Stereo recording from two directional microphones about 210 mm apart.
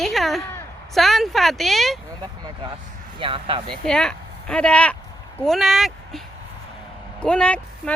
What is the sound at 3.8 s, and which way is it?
Speech, 5° left (ahead or behind).